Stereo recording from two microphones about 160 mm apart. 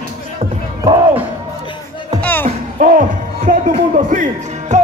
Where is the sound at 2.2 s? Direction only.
10° left (ahead or behind).